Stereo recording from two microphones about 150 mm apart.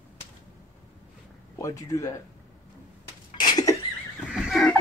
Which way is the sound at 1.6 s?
20° left (ahead or behind).